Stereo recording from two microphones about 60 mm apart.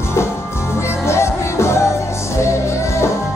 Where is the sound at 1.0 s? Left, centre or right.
Left.